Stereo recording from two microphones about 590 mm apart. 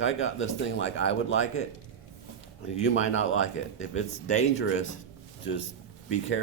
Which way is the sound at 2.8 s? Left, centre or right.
Centre.